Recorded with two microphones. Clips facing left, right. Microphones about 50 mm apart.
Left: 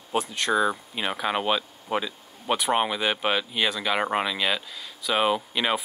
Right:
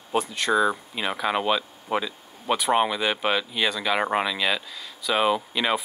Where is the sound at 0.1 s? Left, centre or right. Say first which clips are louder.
Right 1 dB; centre.